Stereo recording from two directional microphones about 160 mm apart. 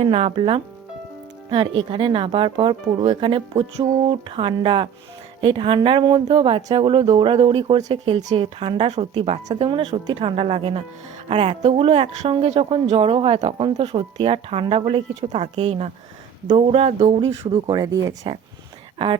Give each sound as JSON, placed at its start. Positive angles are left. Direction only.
{"t": 0.0, "sound": "speech", "side_deg": -35}
{"t": 17.5, "sound": "speech", "side_deg": -25}